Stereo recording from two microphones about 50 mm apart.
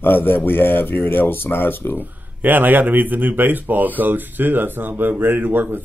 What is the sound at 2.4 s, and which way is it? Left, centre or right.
Speech, right.